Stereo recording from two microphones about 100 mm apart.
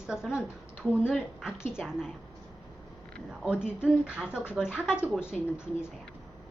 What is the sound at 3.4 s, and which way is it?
Speech, 5° right (ahead or behind).